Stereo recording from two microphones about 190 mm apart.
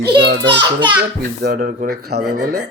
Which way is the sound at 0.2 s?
65° right (ahead or behind).